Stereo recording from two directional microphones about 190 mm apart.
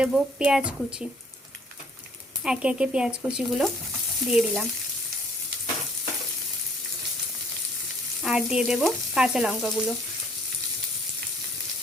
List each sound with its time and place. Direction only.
0.0 s frying: 5° right (ahead or behind)
2.4 s frying: 5° right (ahead or behind)
8.2 s frying: centre (ahead or behind)